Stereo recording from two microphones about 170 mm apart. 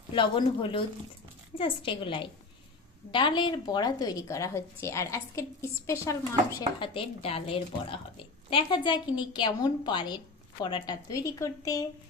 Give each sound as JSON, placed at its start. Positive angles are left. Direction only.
{"t": 0.1, "sound": "a woman's voice", "side_deg": 30}
{"t": 6.6, "sound": "a woman's voice", "side_deg": 30}